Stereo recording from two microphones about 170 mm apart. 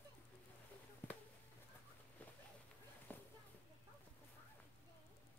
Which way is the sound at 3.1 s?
10° left (ahead or behind).